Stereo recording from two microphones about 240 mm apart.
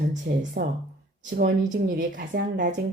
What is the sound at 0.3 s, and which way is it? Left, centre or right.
Speech, right.